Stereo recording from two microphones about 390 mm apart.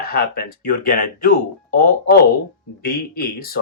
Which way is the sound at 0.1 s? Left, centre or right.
Left.